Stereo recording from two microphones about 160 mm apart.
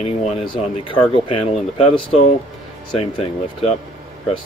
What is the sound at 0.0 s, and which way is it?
Speech, 45° left (ahead or behind).